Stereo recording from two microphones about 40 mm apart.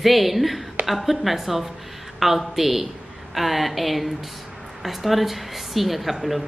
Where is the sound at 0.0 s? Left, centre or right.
Centre.